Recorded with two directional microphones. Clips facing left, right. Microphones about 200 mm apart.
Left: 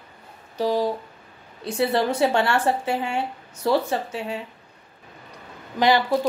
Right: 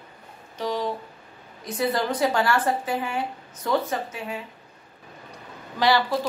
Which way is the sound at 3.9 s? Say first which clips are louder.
Left 3 dB; 30° left (ahead or behind).